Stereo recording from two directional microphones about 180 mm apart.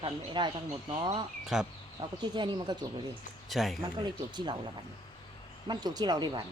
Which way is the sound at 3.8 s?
25° right (ahead or behind).